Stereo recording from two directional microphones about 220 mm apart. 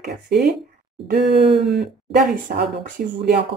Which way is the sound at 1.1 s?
50° right (ahead or behind).